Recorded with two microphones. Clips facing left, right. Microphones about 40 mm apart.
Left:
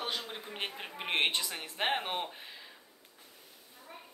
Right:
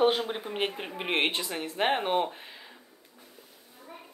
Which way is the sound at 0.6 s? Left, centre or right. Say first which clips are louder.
Right 5 dB; centre.